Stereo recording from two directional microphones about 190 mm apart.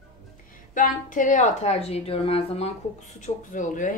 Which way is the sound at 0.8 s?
45° left (ahead or behind).